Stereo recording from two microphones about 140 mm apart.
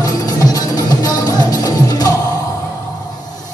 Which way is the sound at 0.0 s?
25° left (ahead or behind).